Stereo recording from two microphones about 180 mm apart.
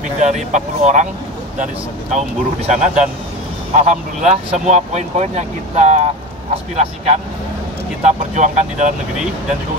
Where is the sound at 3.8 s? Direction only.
45° right (ahead or behind).